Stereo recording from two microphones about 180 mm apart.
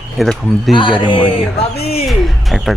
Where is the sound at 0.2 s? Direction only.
Centre (ahead or behind).